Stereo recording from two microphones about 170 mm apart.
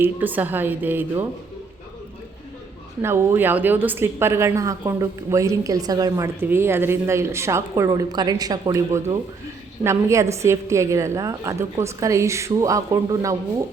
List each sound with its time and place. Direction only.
0.0 s a woman's voice: 10° right (ahead or behind)
3.0 s a woman's voice: 15° right (ahead or behind)